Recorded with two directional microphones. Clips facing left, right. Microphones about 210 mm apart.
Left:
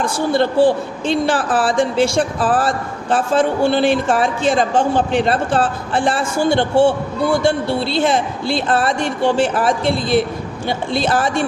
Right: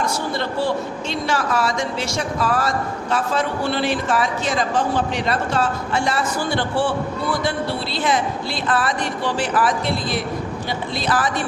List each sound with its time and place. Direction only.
0.0 s a man's voice: 30° left (ahead or behind)